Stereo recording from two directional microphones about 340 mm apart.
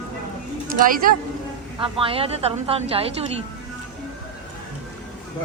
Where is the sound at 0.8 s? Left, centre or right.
Right.